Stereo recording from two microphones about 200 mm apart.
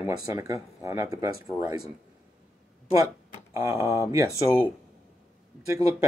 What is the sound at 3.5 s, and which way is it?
Speech, 15° right (ahead or behind).